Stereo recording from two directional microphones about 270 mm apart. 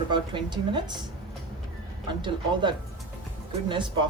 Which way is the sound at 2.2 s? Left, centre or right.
Centre.